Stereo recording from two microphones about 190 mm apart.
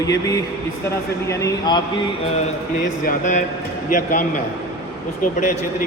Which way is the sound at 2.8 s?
45° left (ahead or behind).